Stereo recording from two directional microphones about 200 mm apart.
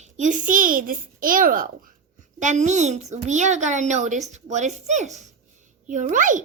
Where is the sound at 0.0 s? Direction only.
35° right (ahead or behind).